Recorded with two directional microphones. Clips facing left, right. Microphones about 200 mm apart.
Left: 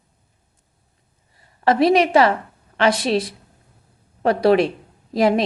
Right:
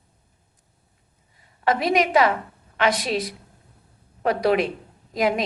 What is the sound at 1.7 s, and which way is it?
A woman's voice, 30° left (ahead or behind).